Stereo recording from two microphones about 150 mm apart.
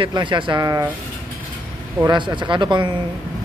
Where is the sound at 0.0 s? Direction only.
30° right (ahead or behind).